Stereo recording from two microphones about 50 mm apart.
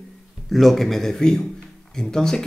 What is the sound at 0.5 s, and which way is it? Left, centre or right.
Speech, centre.